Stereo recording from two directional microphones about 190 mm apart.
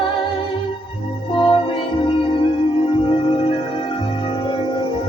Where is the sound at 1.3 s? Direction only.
25° left (ahead or behind).